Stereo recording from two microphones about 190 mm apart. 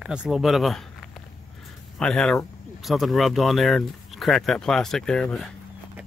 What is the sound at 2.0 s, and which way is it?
Speech, 5° left (ahead or behind).